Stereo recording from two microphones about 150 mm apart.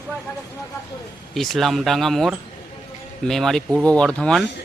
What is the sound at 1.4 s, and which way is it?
Speech, centre (ahead or behind).